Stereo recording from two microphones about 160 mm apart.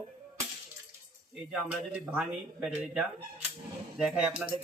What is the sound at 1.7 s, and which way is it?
Speech, 10° right (ahead or behind).